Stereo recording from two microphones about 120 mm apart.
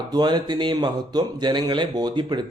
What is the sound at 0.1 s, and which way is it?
Speech, 35° right (ahead or behind).